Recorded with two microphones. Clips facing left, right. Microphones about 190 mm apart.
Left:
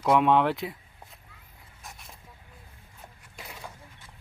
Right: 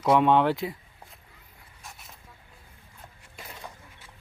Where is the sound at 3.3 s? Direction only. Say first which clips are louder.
Even; centre (ahead or behind).